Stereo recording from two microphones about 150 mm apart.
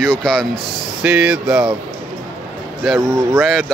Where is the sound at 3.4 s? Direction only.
Centre (ahead or behind).